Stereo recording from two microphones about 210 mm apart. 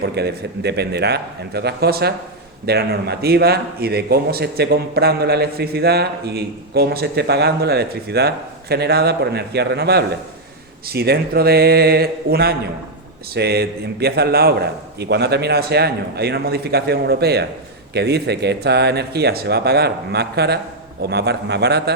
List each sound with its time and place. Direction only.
0.0 s speech: 50° right (ahead or behind)